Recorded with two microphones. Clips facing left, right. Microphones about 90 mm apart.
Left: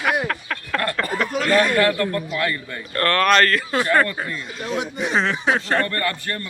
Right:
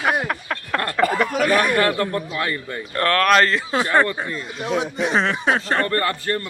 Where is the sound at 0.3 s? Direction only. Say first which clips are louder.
Right 1 dB; 20° right (ahead or behind).